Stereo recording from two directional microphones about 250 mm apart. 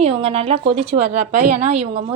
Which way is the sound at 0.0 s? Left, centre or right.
Right.